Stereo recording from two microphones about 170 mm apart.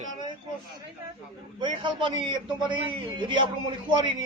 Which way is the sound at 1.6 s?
30° right (ahead or behind).